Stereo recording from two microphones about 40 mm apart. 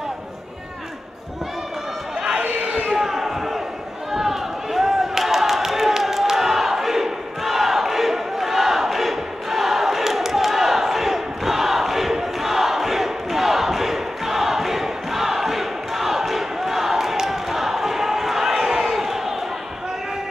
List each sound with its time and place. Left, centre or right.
2.4 s crowd: right
2.9 s a sound: centre
18.7 s crowd: centre